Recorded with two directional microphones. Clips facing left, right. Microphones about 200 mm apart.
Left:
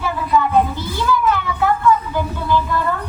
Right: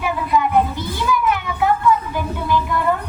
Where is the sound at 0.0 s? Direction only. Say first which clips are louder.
Left 1 dB; 15° right (ahead or behind).